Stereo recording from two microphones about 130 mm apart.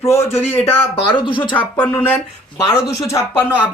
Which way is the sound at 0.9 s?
40° left (ahead or behind).